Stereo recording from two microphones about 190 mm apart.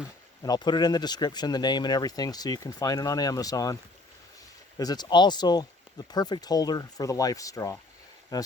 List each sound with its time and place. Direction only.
0.4 s speech: 20° left (ahead or behind)
4.8 s speech: 20° left (ahead or behind)